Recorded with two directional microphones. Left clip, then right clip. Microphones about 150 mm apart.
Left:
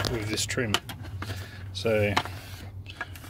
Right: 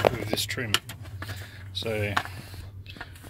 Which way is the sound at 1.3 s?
25° left (ahead or behind).